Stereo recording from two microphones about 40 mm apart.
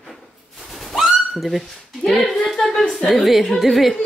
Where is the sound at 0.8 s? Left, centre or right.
Centre.